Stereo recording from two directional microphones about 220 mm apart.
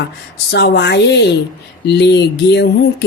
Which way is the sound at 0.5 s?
50° left (ahead or behind).